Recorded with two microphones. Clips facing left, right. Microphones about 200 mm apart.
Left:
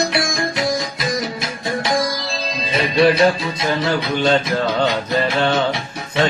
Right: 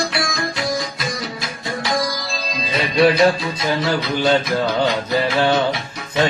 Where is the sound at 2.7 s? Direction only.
25° left (ahead or behind).